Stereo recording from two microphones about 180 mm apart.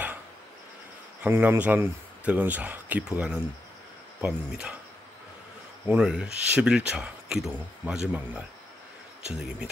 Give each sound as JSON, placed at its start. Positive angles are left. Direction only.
{"t": 1.2, "sound": "speech", "side_deg": -10}
{"t": 5.9, "sound": "speech", "side_deg": -5}